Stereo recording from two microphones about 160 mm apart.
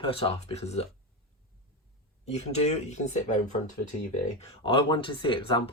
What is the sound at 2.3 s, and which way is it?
Speech, 40° left (ahead or behind).